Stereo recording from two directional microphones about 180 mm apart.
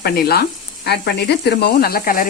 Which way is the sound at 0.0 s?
60° left (ahead or behind).